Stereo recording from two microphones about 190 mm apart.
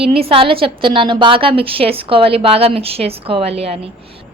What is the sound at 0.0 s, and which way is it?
A woman's voice, 30° right (ahead or behind).